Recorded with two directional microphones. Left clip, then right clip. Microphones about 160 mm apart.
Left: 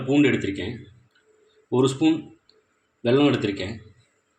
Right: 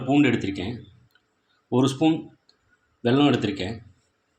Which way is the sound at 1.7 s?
45° right (ahead or behind).